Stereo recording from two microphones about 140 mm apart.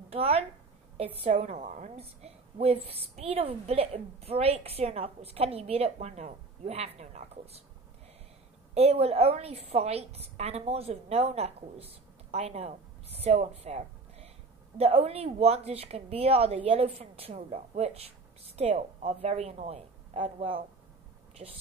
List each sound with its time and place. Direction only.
0.1 s a woman's voice: 45° right (ahead or behind)
8.7 s a woman's voice: 45° right (ahead or behind)